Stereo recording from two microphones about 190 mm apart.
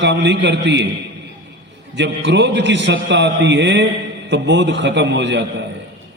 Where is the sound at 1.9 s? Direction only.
70° right (ahead or behind).